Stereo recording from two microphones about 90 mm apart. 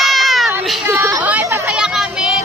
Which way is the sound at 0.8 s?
30° right (ahead or behind).